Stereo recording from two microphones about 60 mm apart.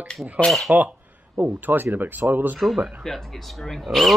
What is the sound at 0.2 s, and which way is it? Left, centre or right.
Speech, right.